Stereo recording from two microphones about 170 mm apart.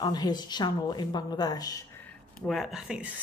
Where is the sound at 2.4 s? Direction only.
Centre (ahead or behind).